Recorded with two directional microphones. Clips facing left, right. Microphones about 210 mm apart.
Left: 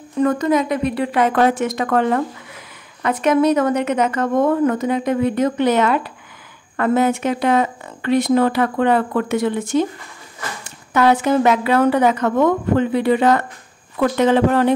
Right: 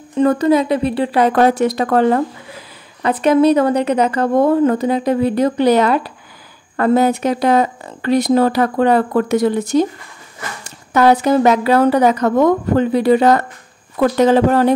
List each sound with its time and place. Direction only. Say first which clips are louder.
0.2 s a woman's voice: right 4 dB; 30° right (ahead or behind)